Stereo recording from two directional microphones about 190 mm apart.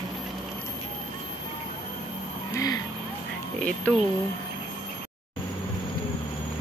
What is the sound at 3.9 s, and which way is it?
Speech, 5° left (ahead or behind).